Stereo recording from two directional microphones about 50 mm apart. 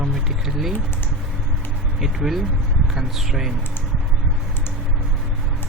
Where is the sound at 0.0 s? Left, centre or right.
Centre.